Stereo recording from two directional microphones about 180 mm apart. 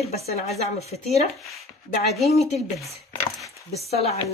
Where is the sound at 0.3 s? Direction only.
35° left (ahead or behind).